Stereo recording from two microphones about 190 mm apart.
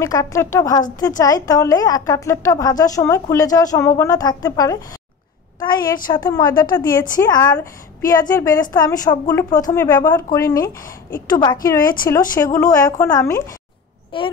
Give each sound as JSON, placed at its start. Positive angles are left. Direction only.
{"t": 0.0, "sound": "a woman's voice", "side_deg": 15}
{"t": 11.8, "sound": "speech", "side_deg": 50}
{"t": 12.4, "sound": "a woman's voice", "side_deg": 15}